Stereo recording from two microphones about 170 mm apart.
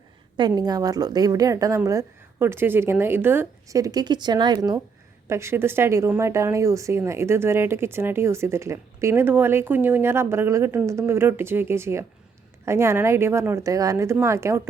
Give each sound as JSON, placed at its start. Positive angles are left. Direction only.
{"t": 0.3, "sound": "a woman's voice", "side_deg": -25}
{"t": 5.3, "sound": "a woman's voice", "side_deg": -15}